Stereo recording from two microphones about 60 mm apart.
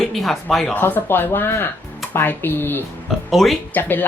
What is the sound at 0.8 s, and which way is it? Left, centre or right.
Speech, left.